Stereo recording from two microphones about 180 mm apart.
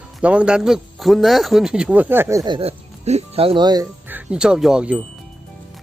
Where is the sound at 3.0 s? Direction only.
35° right (ahead or behind).